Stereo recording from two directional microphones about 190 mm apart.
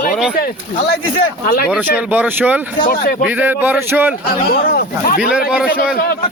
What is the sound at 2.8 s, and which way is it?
Speech, 50° left (ahead or behind).